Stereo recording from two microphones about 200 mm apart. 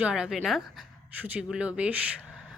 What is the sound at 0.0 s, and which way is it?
Speech, 5° right (ahead or behind).